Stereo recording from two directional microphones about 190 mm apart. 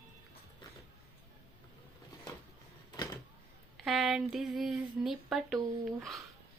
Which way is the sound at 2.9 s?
20° left (ahead or behind).